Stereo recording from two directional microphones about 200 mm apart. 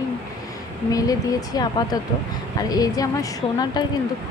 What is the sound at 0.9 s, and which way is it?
A woman's voice, 20° left (ahead or behind).